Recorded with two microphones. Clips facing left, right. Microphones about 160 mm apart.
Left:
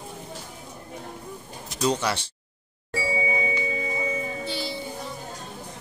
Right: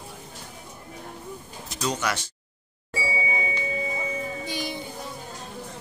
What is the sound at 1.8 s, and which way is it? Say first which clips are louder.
Speech: left 3 dB; 30° left (ahead or behind).